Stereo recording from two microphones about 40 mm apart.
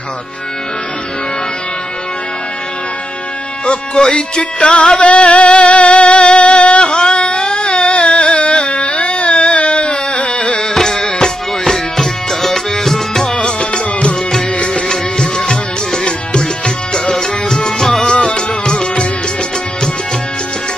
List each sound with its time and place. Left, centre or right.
3.6 s music: left
13.6 s music: left
14.9 s music: centre
18.0 s music: left